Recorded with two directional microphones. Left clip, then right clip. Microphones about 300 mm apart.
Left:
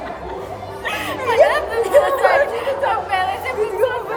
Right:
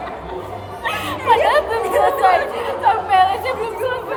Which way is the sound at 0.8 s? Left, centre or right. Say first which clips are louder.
Right 1 dB; centre.